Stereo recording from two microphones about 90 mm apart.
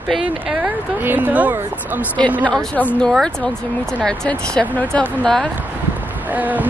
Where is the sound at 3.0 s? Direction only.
5° left (ahead or behind).